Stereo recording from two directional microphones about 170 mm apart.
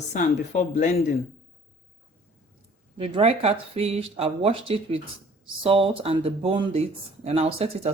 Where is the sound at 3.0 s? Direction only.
35° right (ahead or behind).